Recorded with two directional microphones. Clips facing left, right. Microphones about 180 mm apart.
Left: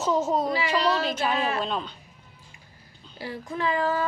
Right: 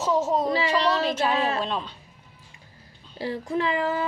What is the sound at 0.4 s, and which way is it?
A woman's voice, 30° right (ahead or behind).